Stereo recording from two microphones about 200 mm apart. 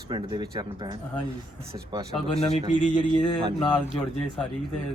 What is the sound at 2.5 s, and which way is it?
Speech, 40° left (ahead or behind).